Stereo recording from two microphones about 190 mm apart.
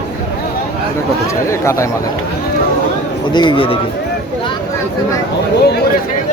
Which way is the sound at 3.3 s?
25° left (ahead or behind).